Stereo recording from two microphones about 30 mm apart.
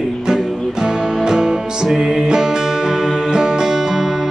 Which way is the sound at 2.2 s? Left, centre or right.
Right.